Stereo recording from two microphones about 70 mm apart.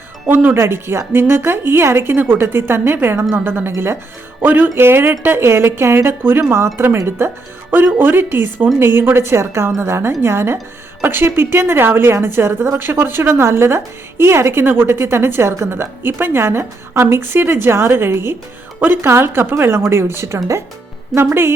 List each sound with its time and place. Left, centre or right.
0.3 s a woman's voice: right
21.1 s a woman's voice: centre